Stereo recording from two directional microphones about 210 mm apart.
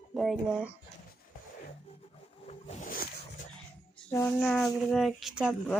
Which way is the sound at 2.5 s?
35° left (ahead or behind).